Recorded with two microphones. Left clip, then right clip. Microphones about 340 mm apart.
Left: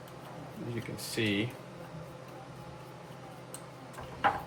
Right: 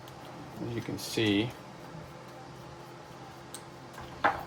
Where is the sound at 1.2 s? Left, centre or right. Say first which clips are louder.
Right 3 dB; centre.